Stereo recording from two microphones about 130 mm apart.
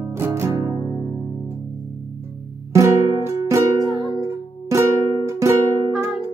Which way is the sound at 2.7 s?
20° right (ahead or behind).